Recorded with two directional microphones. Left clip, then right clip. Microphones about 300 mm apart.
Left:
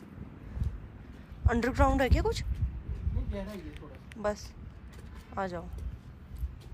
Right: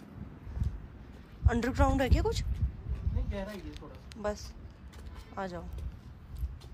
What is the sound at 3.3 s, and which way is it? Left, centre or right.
A man's voice, centre.